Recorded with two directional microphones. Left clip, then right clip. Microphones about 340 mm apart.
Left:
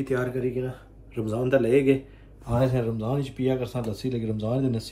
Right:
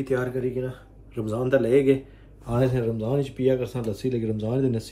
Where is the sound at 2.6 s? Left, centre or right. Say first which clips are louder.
Right 3 dB; centre.